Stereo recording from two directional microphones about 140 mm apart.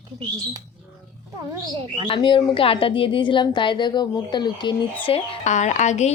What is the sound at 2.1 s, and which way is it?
A woman's voice, 35° left (ahead or behind).